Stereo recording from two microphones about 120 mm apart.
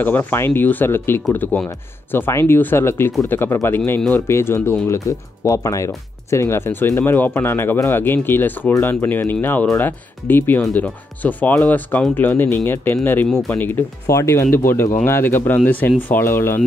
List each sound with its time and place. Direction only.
0.0 s speech: 15° left (ahead or behind)